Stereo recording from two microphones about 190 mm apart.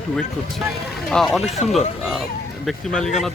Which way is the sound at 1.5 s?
35° left (ahead or behind).